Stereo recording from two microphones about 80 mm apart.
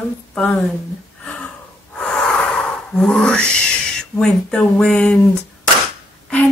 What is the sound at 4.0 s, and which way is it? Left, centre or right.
Speech, centre.